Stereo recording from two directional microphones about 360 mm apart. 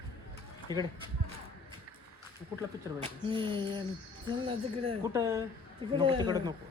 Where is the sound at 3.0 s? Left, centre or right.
Centre.